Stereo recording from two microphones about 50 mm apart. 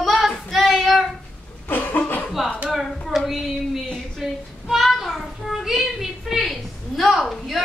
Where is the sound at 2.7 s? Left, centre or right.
Centre.